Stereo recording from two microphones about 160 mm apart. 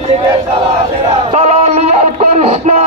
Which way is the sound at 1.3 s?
45° right (ahead or behind).